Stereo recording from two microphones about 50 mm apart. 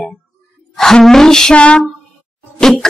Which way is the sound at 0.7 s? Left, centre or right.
Centre.